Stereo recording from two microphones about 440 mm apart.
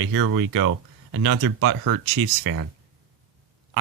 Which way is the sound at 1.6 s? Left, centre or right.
Right.